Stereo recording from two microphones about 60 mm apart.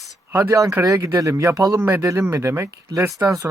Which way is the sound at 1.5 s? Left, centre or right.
Right.